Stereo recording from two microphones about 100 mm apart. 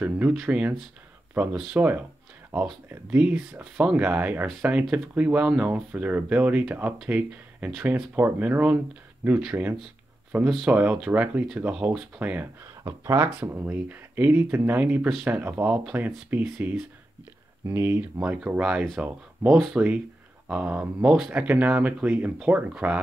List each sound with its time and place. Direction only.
0.0 s speech: 15° right (ahead or behind)
12.8 s speech: 30° right (ahead or behind)
13.4 s speech: 20° right (ahead or behind)